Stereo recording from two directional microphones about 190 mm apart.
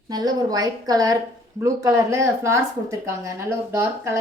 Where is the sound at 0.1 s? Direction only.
20° right (ahead or behind).